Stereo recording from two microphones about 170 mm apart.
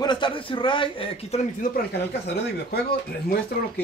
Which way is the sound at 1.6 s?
70° left (ahead or behind).